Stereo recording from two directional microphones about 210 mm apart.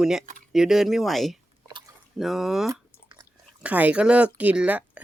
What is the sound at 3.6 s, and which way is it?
Speech, 5° right (ahead or behind).